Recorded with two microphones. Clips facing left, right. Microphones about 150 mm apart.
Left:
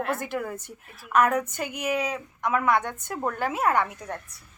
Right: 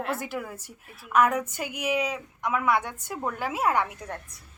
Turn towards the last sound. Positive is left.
turn(degrees=-10)  # may be behind; listen again after turning